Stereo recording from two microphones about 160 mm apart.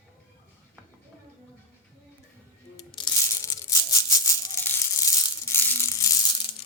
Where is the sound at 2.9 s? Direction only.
20° left (ahead or behind).